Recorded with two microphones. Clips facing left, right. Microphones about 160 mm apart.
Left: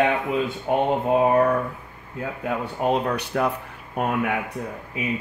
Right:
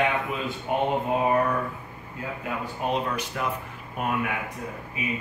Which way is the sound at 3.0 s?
60° left (ahead or behind).